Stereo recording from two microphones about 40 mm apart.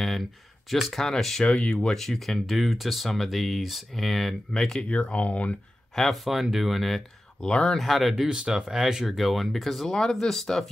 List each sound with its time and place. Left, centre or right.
0.7 s speech: centre
4.8 s speech: left
5.9 s speech: centre
7.4 s speech: left
7.7 s speech: centre
8.3 s speech: centre
9.0 s speech: centre
9.8 s speech: centre